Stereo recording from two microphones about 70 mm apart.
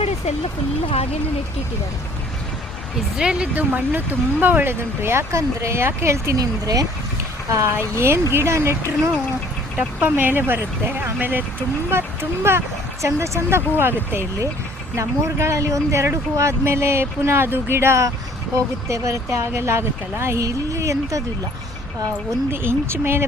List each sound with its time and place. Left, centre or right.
3.2 s speech: centre
3.5 s speech: right
6.3 s speech: right
7.5 s speech: right
9.7 s speech: right
14.9 s speech: right
22.5 s speech: right